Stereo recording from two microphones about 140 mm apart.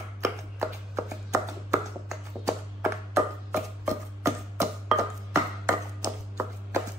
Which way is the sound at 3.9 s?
20° right (ahead or behind).